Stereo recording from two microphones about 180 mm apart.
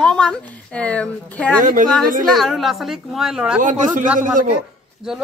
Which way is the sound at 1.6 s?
45° right (ahead or behind).